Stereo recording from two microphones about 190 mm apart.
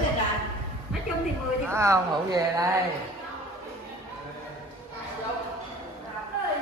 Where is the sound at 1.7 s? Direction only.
15° right (ahead or behind).